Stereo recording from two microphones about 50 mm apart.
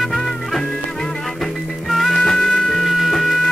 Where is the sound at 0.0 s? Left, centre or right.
Centre.